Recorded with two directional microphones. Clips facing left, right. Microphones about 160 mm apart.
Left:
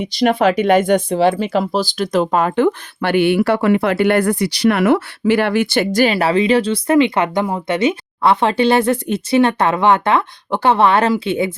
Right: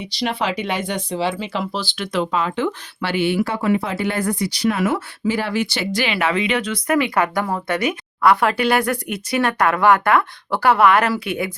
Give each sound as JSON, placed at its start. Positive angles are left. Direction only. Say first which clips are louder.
{"t": 0.0, "sound": "speech", "louder": "left 9 dB", "side_deg": 50}